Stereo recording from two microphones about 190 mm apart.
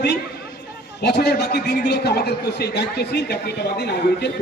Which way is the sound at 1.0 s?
60° left (ahead or behind).